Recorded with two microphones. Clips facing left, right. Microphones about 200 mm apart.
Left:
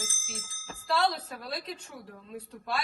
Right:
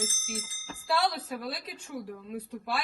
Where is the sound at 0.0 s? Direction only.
10° right (ahead or behind).